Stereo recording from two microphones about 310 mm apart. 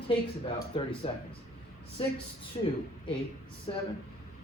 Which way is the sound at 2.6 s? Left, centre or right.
Centre.